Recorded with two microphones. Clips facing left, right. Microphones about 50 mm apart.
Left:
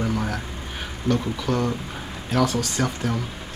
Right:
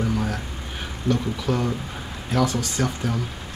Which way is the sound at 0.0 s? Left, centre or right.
Centre.